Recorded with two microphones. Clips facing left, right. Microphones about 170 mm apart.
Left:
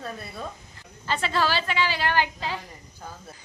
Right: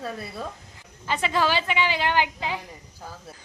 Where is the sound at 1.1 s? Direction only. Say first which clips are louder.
Right 1 dB; 15° right (ahead or behind).